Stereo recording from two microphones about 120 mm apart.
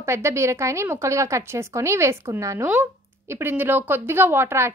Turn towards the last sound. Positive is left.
turn(degrees=-20)  # may be behind; listen again after turning